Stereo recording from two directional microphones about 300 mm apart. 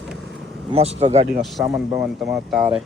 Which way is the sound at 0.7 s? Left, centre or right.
Centre.